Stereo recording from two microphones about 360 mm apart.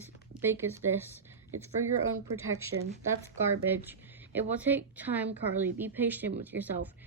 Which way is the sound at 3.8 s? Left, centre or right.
Centre.